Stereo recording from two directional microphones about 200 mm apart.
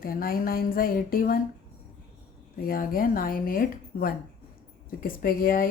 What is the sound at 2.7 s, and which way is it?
Speech, 45° left (ahead or behind).